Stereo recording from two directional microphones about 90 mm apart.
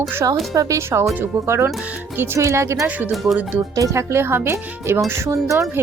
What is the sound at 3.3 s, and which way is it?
Speech, 5° right (ahead or behind).